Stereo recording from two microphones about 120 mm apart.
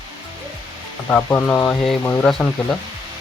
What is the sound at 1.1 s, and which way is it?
Speech, 10° left (ahead or behind).